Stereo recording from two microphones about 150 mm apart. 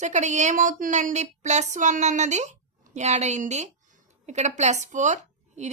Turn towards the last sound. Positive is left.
turn(degrees=-50)  # may be behind; listen again after turning